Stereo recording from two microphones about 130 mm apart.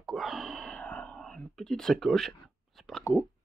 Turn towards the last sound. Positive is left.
turn(degrees=20)  # may be behind; listen again after turning